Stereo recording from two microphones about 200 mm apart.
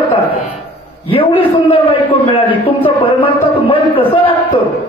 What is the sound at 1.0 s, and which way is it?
A man's voice, 25° left (ahead or behind).